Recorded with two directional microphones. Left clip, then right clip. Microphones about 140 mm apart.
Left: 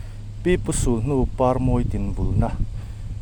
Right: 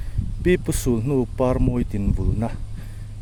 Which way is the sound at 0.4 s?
40° right (ahead or behind).